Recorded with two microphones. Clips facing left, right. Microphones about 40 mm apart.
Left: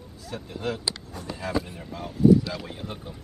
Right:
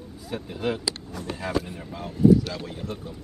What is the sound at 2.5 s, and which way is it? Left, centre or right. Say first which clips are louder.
Speech: right 2 dB; centre.